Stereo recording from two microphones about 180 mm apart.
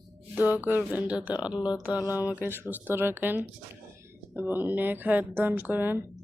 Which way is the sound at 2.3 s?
10° right (ahead or behind).